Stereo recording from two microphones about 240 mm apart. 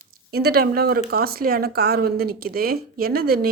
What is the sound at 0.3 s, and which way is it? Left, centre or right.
Speech, right.